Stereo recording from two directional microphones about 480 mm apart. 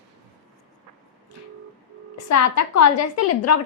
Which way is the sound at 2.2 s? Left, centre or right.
Left.